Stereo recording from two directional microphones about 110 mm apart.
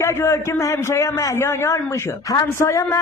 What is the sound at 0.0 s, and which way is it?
A man's voice, 25° left (ahead or behind).